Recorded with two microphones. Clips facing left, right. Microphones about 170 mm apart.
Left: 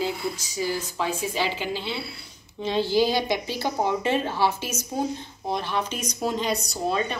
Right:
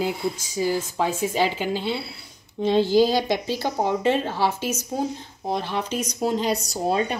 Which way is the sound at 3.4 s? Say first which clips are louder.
Right 2 dB; 35° right (ahead or behind).